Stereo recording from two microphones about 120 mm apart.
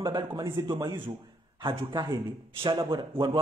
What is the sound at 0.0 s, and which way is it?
A man's voice, 35° right (ahead or behind).